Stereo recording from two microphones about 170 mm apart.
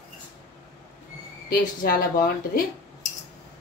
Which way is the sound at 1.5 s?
55° left (ahead or behind).